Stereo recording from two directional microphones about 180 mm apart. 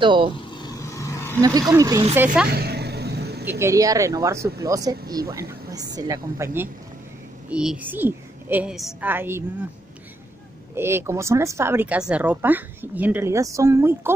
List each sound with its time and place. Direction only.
0.0 s speech: 25° right (ahead or behind)
0.3 s vehicle: 25° left (ahead or behind)
1.4 s speech: 20° right (ahead or behind)
2.1 s a woman's voice: 10° right (ahead or behind)
2.5 s vehicle: 60° right (ahead or behind)
3.4 s a woman's voice: 15° right (ahead or behind)
10.7 s a woman's voice: 15° right (ahead or behind)